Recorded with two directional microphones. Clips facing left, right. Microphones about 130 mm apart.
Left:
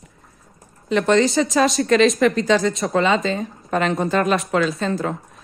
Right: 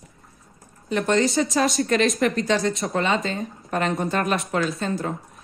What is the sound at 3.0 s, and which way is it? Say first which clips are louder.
Speech: left 5 dB; 90° left.